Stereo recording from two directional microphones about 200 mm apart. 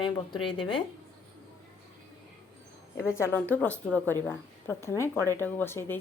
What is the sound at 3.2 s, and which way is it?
Speech, 10° left (ahead or behind).